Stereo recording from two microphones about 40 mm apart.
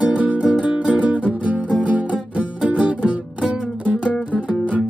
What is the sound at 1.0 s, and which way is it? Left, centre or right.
Music, right.